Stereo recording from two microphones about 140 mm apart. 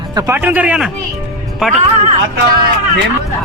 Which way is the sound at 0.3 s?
10° right (ahead or behind).